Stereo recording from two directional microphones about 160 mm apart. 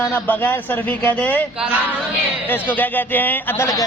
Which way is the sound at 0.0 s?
15° left (ahead or behind).